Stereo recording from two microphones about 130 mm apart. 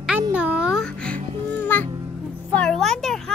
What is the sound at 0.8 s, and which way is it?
Music, 10° left (ahead or behind).